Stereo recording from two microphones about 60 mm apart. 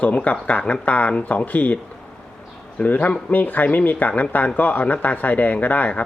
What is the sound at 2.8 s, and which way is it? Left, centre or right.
Speech, left.